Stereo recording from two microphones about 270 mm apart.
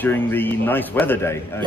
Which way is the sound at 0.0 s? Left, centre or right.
Centre.